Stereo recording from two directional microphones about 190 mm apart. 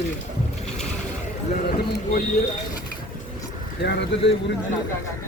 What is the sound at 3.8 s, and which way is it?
Speech, 65° left (ahead or behind).